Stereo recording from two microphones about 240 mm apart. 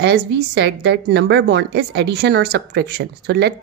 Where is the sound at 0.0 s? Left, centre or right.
Right.